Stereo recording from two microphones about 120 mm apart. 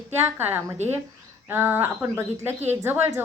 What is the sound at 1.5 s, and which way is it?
A woman's voice, 20° right (ahead or behind).